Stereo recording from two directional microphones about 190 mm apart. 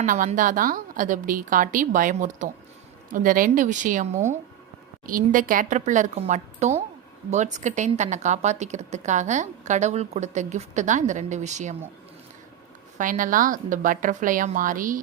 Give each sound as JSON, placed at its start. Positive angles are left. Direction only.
{"t": 0.0, "sound": "a woman's voice", "side_deg": -40}
{"t": 13.0, "sound": "a woman's voice", "side_deg": -45}